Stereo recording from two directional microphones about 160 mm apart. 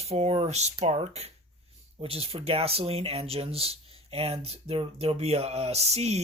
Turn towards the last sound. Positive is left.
turn(degrees=-40)  # may be behind; listen again after turning